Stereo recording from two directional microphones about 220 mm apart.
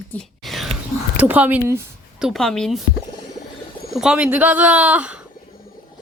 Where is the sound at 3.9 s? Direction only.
5° right (ahead or behind).